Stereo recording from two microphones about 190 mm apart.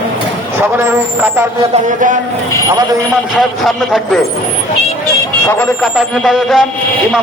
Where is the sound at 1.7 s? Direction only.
45° right (ahead or behind).